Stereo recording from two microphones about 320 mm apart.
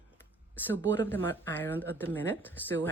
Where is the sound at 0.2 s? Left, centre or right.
Centre.